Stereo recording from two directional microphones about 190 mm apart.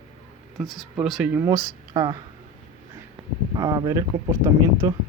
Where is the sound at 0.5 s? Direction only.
Centre (ahead or behind); by 2.2 s 20° right (ahead or behind).